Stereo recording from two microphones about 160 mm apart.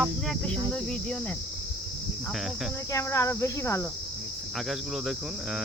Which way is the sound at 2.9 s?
20° left (ahead or behind).